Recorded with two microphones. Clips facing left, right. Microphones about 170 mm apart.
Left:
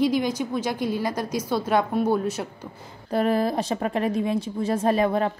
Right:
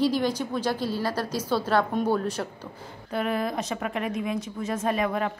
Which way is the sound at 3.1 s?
35° left (ahead or behind).